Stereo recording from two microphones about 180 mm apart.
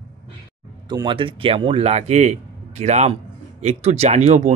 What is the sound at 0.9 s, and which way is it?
Speech, 25° right (ahead or behind).